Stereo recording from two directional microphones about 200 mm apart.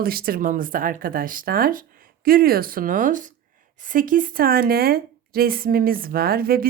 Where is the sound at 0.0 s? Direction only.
50° right (ahead or behind).